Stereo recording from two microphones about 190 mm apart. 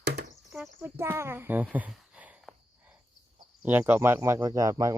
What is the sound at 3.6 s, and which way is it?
Speech, 10° right (ahead or behind).